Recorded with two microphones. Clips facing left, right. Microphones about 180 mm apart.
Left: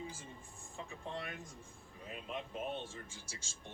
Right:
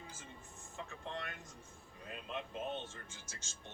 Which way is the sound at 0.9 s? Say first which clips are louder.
Left 2 dB; 10° left (ahead or behind).